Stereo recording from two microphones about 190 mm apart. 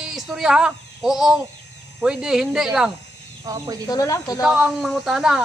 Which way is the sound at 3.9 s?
20° left (ahead or behind).